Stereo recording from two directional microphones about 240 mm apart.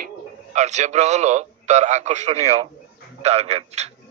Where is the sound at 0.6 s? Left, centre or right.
Right.